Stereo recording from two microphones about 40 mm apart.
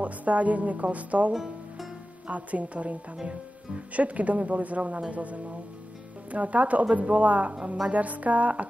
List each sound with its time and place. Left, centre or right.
0.0 s speech: right
1.3 s music: centre
2.2 s speech: right